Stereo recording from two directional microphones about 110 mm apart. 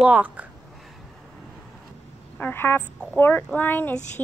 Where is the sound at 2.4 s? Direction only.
20° left (ahead or behind).